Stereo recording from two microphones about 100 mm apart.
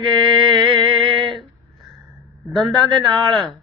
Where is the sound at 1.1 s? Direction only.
55° right (ahead or behind).